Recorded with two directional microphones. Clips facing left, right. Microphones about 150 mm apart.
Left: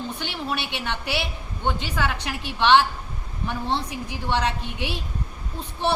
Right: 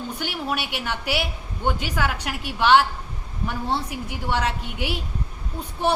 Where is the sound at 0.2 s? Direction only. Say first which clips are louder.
Right 1 dB; 10° right (ahead or behind).